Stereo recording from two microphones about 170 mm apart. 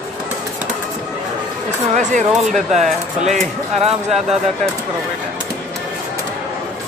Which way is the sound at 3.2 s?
40° right (ahead or behind).